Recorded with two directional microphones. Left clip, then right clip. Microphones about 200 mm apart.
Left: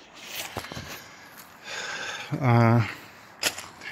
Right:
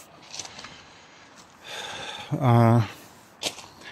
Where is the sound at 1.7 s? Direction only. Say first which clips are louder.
Left 2 dB; 15° right (ahead or behind).